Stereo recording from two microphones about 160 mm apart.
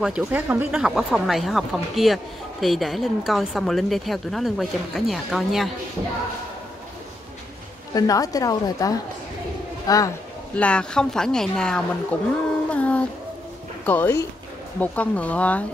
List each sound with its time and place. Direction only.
0.0 s a woman's voice: 10° right (ahead or behind)
7.9 s a woman's voice: 20° left (ahead or behind)
10.5 s a woman's voice: 5° left (ahead or behind)
12.7 s music: 10° left (ahead or behind)
13.8 s speech: 10° left (ahead or behind)